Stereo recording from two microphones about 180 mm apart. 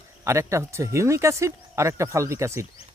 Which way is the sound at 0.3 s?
15° right (ahead or behind).